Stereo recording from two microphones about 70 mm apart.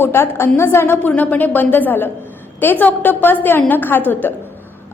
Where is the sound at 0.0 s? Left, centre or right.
Left.